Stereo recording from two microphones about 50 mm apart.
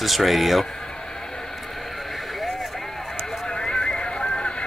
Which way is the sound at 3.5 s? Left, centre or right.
Centre.